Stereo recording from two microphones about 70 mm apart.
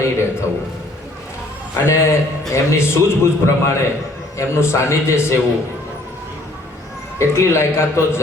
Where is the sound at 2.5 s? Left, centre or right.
Left.